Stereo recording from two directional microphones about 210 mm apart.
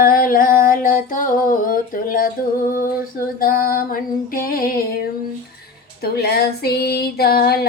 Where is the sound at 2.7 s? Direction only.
45° left (ahead or behind).